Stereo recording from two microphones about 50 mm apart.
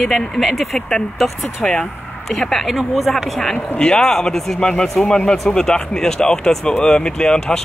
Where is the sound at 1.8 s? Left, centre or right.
Centre.